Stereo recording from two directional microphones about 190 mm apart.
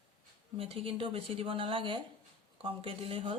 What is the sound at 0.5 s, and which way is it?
Speech, 30° right (ahead or behind).